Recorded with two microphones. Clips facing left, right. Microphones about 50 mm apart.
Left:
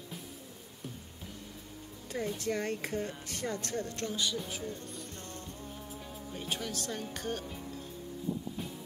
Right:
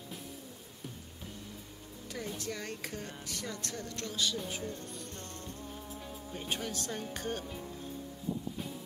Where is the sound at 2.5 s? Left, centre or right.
Left.